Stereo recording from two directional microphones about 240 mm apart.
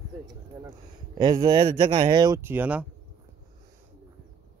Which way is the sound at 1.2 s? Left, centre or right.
Centre.